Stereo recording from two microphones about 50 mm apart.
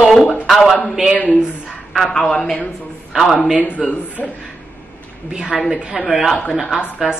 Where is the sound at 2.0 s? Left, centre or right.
Centre.